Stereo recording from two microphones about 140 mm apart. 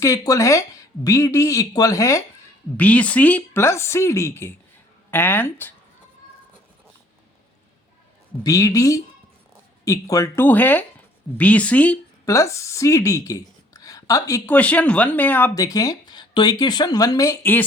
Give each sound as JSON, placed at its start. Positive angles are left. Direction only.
{"t": 0.0, "sound": "speech", "side_deg": 25}
{"t": 2.7, "sound": "speech", "side_deg": 10}
{"t": 8.4, "sound": "speech", "side_deg": 25}
{"t": 12.2, "sound": "speech", "side_deg": 20}
{"t": 14.4, "sound": "speech", "side_deg": 10}
{"t": 15.5, "sound": "speech", "side_deg": 25}